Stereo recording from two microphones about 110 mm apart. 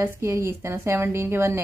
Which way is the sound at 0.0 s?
25° right (ahead or behind).